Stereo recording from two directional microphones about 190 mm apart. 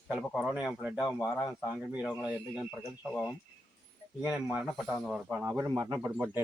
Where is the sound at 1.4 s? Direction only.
Centre (ahead or behind).